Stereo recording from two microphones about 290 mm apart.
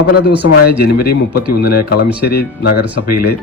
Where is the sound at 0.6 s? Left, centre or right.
Left.